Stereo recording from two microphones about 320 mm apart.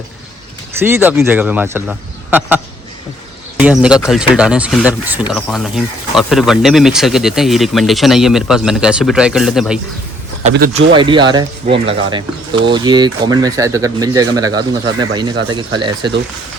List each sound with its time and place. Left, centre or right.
0.8 s speech: centre
3.6 s speech: centre
10.4 s speech: right